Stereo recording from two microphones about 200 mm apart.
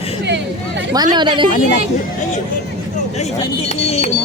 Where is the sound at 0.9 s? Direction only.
20° right (ahead or behind).